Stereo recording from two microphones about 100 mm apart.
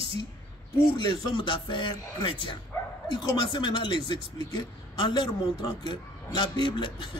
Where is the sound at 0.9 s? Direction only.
50° left (ahead or behind).